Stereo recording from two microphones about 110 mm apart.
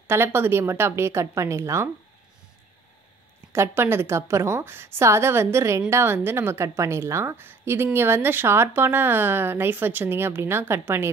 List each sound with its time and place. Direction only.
0.1 s a woman's voice: 20° right (ahead or behind)
3.5 s a woman's voice: 25° right (ahead or behind)